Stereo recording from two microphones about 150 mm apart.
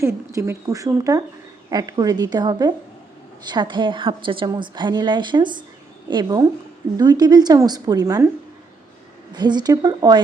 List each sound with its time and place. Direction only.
0.0 s a woman's voice: 20° right (ahead or behind)
9.3 s a woman's voice: 30° right (ahead or behind)